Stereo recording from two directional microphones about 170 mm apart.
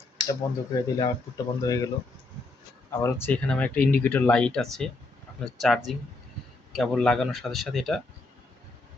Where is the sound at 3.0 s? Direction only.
10° left (ahead or behind).